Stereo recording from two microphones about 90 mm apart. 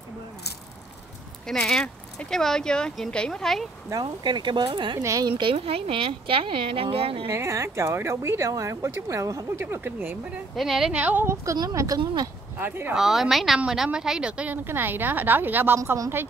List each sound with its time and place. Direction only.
1.5 s speech: 5° left (ahead or behind)
4.0 s speech: 55° right (ahead or behind)
5.0 s speech: 40° right (ahead or behind)
5.4 s speech: 90° right
7.2 s speech: 30° right (ahead or behind)
10.5 s a woman's voice: centre (ahead or behind)
10.9 s speech: 15° right (ahead or behind)
11.7 s speech: 35° right (ahead or behind)
12.5 s a woman's voice: 20° right (ahead or behind)
12.9 s a woman's voice: 5° right (ahead or behind); by 16.3 s 25° right (ahead or behind)